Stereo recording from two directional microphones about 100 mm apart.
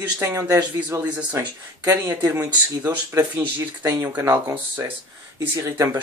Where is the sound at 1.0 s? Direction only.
15° right (ahead or behind).